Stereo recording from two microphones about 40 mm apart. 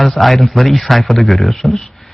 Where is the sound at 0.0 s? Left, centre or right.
Centre.